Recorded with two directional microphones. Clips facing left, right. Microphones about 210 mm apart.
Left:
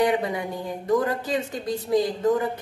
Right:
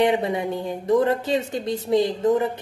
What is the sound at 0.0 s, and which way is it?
A woman's voice, 25° right (ahead or behind).